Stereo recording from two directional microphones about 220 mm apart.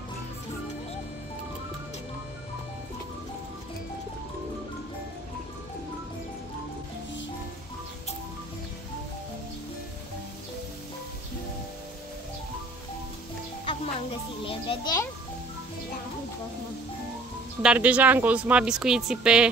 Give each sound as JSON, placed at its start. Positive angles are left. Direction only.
{"t": 13.7, "sound": "a child's voice", "side_deg": 25}
{"t": 17.6, "sound": "speech", "side_deg": -5}